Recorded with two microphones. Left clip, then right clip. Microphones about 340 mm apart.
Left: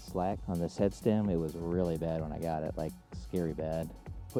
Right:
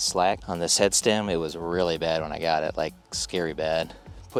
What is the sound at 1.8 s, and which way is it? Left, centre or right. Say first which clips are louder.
Speech: right 10 dB; centre.